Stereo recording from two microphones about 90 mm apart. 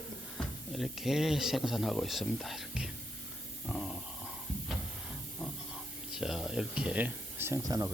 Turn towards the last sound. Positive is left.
turn(degrees=-45)  # may be behind; listen again after turning